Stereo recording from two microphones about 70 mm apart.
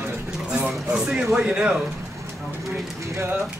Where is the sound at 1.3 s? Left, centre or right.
Centre.